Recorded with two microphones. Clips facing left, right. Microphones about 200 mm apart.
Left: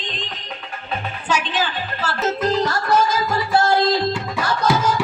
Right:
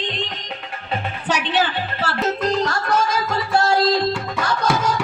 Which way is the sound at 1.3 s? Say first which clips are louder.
Right 2 dB; 65° right (ahead or behind).